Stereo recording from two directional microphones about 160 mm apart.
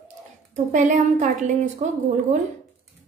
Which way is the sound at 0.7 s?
50° right (ahead or behind).